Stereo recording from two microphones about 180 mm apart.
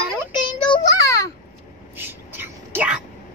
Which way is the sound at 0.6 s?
25° left (ahead or behind).